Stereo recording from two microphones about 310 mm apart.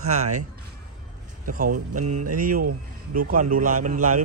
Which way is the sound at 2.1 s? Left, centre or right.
Right.